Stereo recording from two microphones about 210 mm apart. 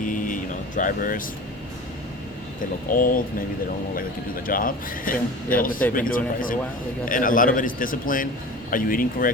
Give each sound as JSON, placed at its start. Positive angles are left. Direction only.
{"t": 0.0, "sound": "vehicle", "side_deg": 40}
{"t": 0.8, "sound": "a man's voice", "side_deg": 40}
{"t": 2.9, "sound": "a man's voice", "side_deg": 40}
{"t": 4.4, "sound": "a man's voice", "side_deg": 40}